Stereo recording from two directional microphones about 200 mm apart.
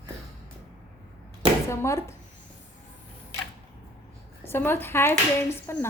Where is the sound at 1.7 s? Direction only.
15° left (ahead or behind).